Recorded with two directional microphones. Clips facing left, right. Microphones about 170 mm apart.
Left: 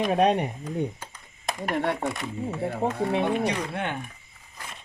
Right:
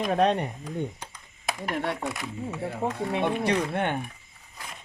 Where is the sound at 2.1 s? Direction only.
Centre (ahead or behind).